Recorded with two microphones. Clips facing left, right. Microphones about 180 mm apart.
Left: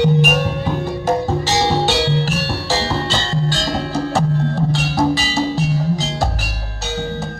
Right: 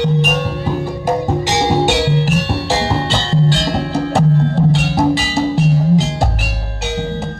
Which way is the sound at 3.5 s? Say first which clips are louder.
Right 3 dB; 25° right (ahead or behind).